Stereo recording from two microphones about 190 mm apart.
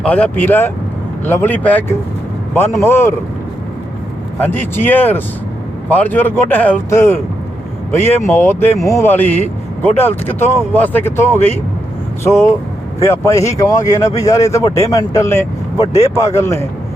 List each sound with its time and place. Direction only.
0.0 s speech: 10° left (ahead or behind)
4.4 s speech: 10° left (ahead or behind)
15.9 s speech: 35° left (ahead or behind)
16.1 s speech: 15° left (ahead or behind)